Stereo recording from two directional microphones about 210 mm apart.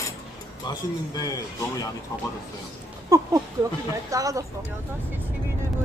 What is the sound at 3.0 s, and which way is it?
Speech, 15° right (ahead or behind).